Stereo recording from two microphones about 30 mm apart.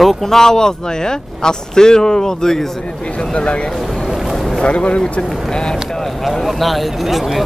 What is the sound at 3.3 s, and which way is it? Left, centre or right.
Speech, left.